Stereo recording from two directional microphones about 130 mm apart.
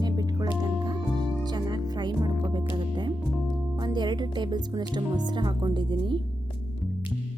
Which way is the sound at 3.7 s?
35° right (ahead or behind).